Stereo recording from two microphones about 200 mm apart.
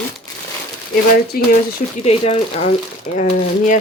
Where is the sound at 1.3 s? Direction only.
50° left (ahead or behind).